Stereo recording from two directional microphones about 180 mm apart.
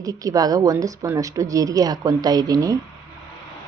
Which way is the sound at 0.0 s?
20° right (ahead or behind).